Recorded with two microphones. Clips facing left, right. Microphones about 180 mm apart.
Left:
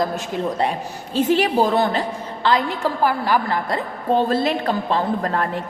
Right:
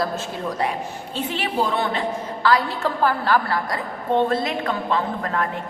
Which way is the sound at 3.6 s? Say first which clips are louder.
Left 3 dB; 30° left (ahead or behind).